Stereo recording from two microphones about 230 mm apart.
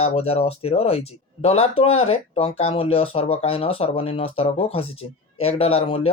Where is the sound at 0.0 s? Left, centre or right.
Left.